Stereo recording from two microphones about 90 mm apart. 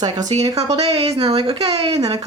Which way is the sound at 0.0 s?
45° right (ahead or behind).